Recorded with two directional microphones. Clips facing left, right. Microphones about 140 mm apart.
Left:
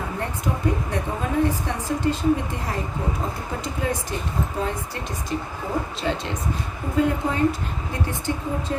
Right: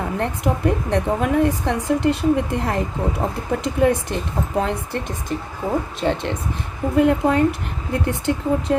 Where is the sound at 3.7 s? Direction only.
65° right (ahead or behind).